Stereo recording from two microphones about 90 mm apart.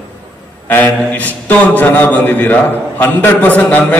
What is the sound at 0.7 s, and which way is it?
A man's voice, 20° left (ahead or behind).